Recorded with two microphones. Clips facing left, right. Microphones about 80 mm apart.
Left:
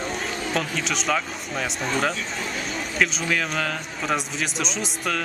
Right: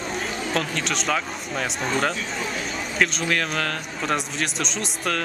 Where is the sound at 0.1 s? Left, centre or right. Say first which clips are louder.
Right 4 dB; centre.